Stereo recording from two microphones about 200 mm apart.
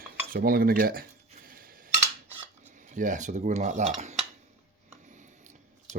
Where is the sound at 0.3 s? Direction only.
45° right (ahead or behind).